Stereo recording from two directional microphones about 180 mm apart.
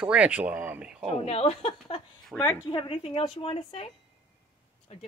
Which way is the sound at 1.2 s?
35° left (ahead or behind).